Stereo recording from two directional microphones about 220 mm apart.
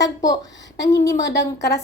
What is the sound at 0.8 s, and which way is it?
Speech, 15° left (ahead or behind).